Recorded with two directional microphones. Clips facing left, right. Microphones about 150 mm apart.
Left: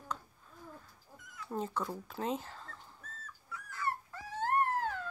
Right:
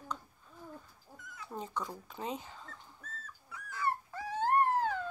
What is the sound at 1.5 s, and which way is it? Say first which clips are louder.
Speech: left 3 dB; centre (ahead or behind).